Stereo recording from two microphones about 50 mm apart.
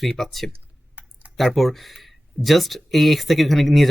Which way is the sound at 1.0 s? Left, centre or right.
Right.